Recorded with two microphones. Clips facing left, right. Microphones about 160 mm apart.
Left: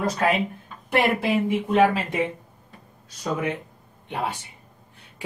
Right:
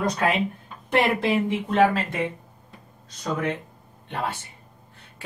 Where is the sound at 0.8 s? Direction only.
10° left (ahead or behind).